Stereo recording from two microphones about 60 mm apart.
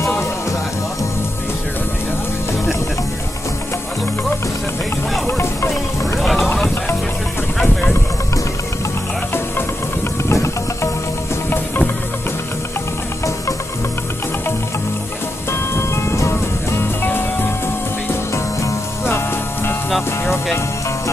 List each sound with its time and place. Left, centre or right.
6.2 s vehicle: centre
7.5 s a sound: centre
10.3 s music: left
11.5 s music: left
15.7 s music: left
17.0 s music: left
19.0 s music: left